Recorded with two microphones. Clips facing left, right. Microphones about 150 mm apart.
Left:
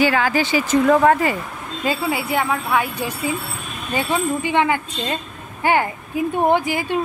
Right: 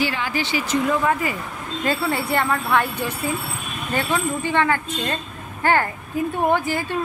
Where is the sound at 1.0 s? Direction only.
70° left (ahead or behind).